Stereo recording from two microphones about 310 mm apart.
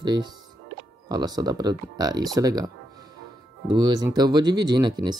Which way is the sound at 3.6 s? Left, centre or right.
Centre.